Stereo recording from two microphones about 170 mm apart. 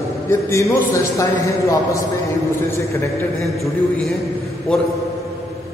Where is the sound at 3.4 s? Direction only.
Centre (ahead or behind).